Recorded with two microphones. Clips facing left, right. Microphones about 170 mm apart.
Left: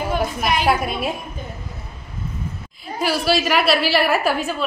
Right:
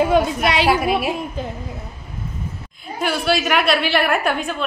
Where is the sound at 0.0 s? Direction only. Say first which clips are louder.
Right 6 dB; 75° right (ahead or behind).